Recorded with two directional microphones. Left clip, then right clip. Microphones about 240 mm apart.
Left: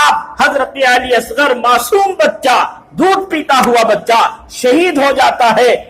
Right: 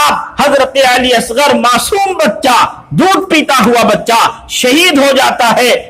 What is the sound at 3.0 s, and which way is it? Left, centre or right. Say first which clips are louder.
A man's voice: right 3 dB; right.